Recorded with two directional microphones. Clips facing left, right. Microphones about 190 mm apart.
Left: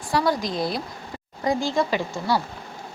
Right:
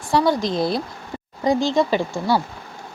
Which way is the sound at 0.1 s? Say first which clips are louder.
Right 4 dB; 25° right (ahead or behind).